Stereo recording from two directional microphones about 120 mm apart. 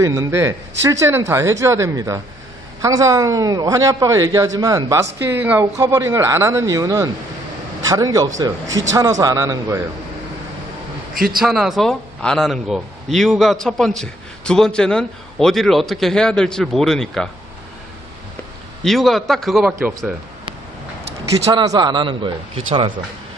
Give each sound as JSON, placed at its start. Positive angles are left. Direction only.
{"t": 0.0, "sound": "a man's voice", "side_deg": -25}
{"t": 11.3, "sound": "a man's voice", "side_deg": 0}
{"t": 18.9, "sound": "a man's voice", "side_deg": 0}
{"t": 21.5, "sound": "a man's voice", "side_deg": -35}